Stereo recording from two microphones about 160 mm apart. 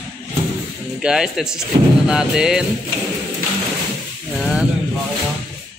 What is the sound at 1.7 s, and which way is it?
Speech, 30° right (ahead or behind).